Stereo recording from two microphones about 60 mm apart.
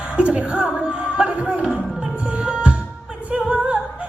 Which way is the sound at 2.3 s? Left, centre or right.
Centre.